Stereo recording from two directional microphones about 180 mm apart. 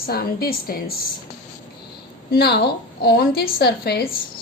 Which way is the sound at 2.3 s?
60° left (ahead or behind).